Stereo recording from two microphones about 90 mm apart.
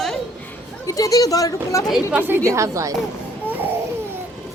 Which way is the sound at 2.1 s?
20° right (ahead or behind).